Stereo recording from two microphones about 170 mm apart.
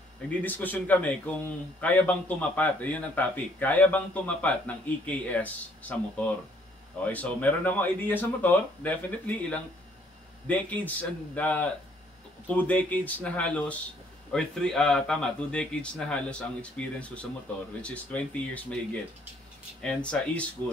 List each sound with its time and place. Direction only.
0.3 s speech: 10° left (ahead or behind)
19.8 s speech: 5° left (ahead or behind)